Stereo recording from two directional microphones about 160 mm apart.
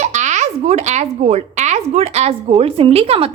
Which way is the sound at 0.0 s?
50° right (ahead or behind).